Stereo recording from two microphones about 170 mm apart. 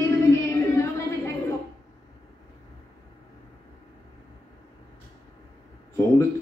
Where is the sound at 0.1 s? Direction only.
15° left (ahead or behind).